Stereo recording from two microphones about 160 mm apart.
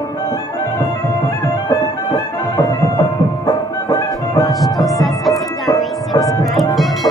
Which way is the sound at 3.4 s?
25° left (ahead or behind).